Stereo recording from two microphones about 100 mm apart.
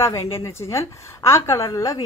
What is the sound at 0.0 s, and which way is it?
A woman's voice, 30° left (ahead or behind).